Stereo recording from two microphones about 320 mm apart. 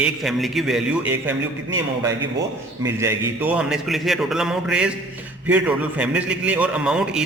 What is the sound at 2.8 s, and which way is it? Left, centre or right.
A man's voice, centre.